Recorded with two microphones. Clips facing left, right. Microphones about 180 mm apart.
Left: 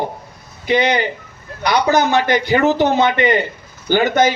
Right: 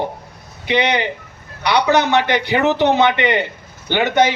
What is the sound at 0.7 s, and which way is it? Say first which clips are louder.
Speech: left 2 dB; 65° right (ahead or behind).